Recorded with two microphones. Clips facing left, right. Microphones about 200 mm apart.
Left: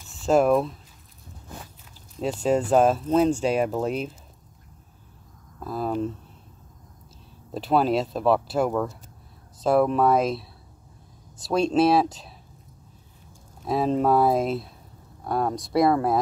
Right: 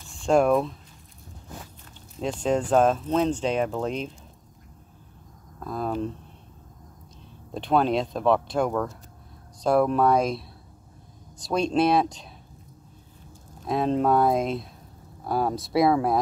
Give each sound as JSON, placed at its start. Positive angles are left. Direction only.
{"t": 0.1, "sound": "speech", "side_deg": 5}
{"t": 2.1, "sound": "speech", "side_deg": 5}
{"t": 5.6, "sound": "speech", "side_deg": 5}
{"t": 7.5, "sound": "speech", "side_deg": 5}
{"t": 11.4, "sound": "speech", "side_deg": 5}
{"t": 13.7, "sound": "speech", "side_deg": 5}